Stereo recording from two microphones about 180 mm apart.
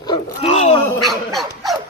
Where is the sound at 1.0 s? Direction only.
Centre (ahead or behind).